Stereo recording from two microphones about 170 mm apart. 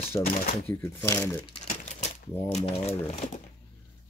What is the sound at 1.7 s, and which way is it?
Typewriter, 40° left (ahead or behind).